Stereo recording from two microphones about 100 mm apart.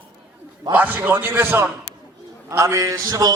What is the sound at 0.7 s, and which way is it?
A man's voice, 20° right (ahead or behind).